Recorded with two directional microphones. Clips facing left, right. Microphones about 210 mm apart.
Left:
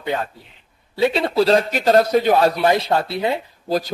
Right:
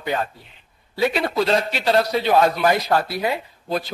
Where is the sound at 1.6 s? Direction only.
45° left (ahead or behind).